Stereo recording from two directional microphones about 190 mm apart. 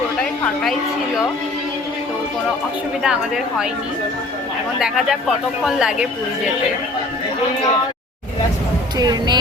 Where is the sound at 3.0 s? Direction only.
5° right (ahead or behind).